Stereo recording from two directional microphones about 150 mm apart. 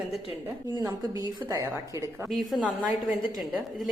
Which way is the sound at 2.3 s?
Centre (ahead or behind).